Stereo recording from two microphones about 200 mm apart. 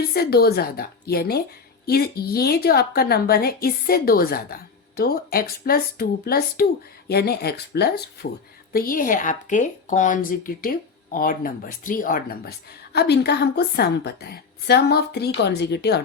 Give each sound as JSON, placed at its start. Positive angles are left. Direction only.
{"t": 0.1, "sound": "speech", "side_deg": 50}